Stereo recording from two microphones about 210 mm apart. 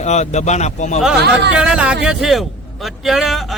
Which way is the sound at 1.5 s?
5° right (ahead or behind).